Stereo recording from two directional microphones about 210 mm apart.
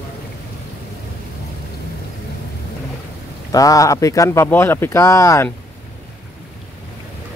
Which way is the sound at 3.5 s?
15° left (ahead or behind).